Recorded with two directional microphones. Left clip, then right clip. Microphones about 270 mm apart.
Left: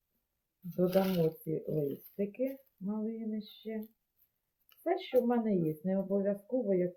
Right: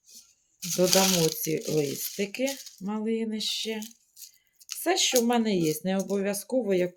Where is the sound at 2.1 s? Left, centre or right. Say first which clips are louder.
Right 7 dB; right.